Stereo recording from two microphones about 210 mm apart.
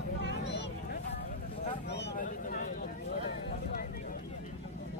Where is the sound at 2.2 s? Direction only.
40° left (ahead or behind).